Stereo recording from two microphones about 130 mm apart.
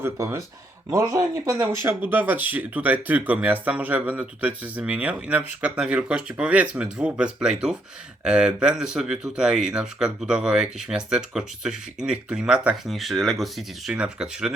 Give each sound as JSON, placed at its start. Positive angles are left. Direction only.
{"t": 0.0, "sound": "speech", "side_deg": -20}